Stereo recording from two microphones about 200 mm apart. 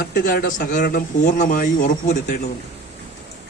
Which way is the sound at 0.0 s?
50° left (ahead or behind).